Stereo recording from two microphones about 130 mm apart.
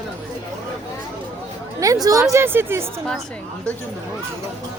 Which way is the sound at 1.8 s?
25° right (ahead or behind).